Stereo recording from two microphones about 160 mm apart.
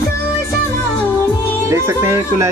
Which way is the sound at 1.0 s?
10° left (ahead or behind).